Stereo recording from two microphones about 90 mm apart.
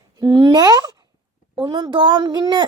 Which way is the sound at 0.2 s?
50° right (ahead or behind).